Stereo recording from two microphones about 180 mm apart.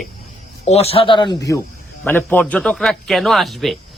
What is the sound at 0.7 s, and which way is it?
Speech, 35° left (ahead or behind).